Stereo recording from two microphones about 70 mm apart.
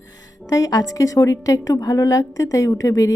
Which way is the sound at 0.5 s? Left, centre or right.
Left.